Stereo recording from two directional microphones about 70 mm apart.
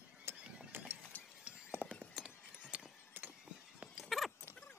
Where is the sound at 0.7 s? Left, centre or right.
Right.